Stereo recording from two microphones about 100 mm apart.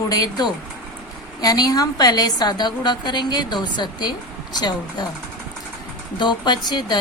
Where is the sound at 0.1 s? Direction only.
40° left (ahead or behind).